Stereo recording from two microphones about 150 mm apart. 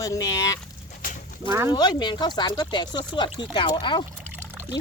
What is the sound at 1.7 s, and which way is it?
Speech, 30° left (ahead or behind).